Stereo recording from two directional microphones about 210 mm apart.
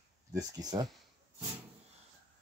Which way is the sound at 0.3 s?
15° right (ahead or behind).